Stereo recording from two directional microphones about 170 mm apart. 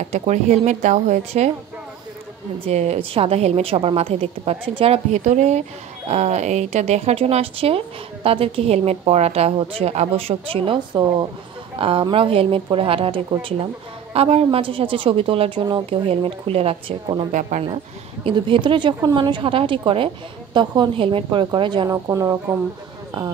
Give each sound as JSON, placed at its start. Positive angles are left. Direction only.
{"t": 0.1, "sound": "a woman's voice", "side_deg": -40}
{"t": 2.6, "sound": "speech", "side_deg": -40}
{"t": 17.3, "sound": "a woman's voice", "side_deg": -45}
{"t": 18.2, "sound": "a woman's voice", "side_deg": -30}